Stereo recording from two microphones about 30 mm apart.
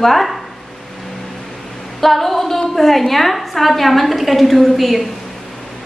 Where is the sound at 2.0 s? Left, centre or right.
Centre.